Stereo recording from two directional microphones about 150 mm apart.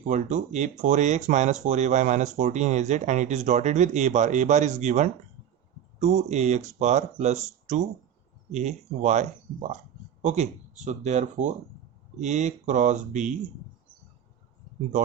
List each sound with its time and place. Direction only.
0.1 s speech: 55° right (ahead or behind)